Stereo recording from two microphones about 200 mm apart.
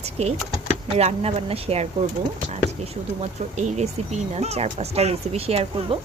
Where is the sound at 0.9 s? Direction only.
30° right (ahead or behind).